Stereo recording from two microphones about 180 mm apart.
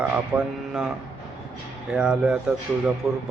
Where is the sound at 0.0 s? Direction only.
5° right (ahead or behind).